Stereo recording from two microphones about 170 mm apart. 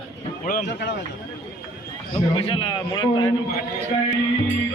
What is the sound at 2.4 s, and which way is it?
Speech, 30° left (ahead or behind).